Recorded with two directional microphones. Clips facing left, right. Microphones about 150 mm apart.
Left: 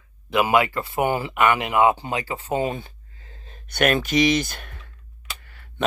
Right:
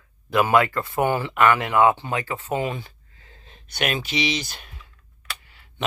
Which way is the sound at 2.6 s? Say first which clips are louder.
Left 2 dB; 45° left (ahead or behind).